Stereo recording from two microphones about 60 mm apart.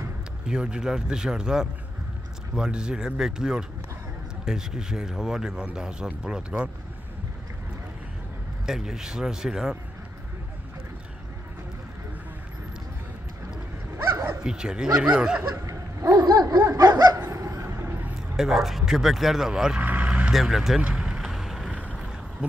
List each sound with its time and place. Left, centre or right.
0.5 s speech: centre
8.6 s speech: centre
14.4 s speech: centre
16.1 s a sound: right
18.3 s speech: centre
19.8 s vehicle: right
20.3 s speech: centre
20.8 s vehicle: centre
22.4 s speech: centre